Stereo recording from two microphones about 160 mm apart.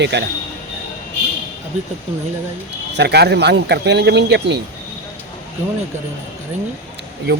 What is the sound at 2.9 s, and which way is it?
Speech, 90° right.